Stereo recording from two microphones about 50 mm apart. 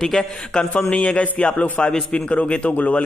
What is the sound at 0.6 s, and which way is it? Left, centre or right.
A man's voice, centre.